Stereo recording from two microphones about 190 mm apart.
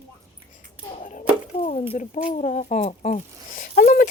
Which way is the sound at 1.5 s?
30° left (ahead or behind).